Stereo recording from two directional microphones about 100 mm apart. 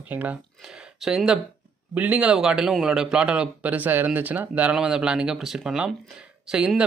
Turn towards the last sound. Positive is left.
turn(degrees=-10)  # may be behind; listen again after turning